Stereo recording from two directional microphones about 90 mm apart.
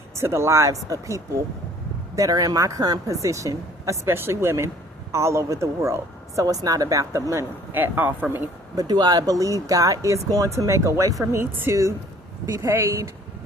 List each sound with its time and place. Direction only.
0.2 s speech: 30° right (ahead or behind)
6.4 s speech: 45° right (ahead or behind)
7.7 s a man's voice: 20° right (ahead or behind)
8.7 s a man's voice: 45° right (ahead or behind)